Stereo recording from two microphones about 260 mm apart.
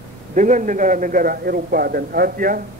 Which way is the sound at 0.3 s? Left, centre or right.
Right.